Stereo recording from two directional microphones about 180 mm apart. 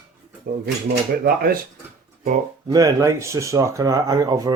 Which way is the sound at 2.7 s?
20° right (ahead or behind).